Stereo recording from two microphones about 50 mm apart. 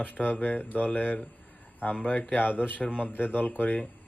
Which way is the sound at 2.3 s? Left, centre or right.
Left.